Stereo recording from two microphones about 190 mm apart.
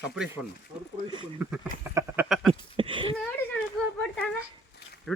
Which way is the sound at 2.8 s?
25° right (ahead or behind).